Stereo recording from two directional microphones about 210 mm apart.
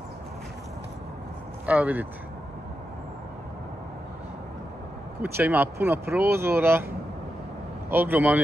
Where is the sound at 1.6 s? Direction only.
10° right (ahead or behind).